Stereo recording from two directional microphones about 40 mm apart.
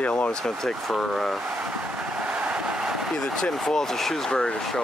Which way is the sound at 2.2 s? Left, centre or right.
Right.